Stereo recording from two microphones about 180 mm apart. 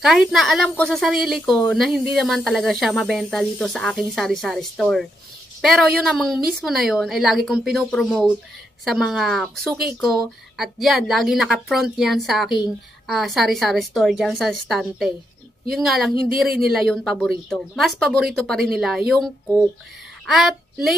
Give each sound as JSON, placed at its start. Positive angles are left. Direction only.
{"t": 0.0, "sound": "a woman's voice", "side_deg": 0}